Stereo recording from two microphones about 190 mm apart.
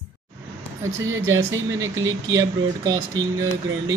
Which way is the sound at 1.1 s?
15° right (ahead or behind).